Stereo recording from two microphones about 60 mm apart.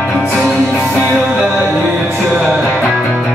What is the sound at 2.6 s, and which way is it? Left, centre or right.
Music, centre.